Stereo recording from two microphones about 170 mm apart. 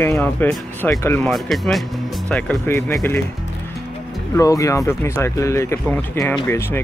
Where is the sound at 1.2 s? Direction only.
Centre (ahead or behind).